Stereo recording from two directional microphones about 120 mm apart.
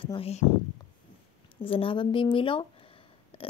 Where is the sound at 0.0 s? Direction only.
45° left (ahead or behind).